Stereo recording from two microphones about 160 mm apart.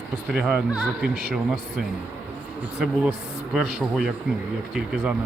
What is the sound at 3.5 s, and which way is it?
Speech, 5° right (ahead or behind).